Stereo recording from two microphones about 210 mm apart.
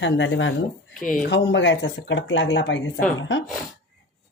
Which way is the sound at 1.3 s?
60° left (ahead or behind).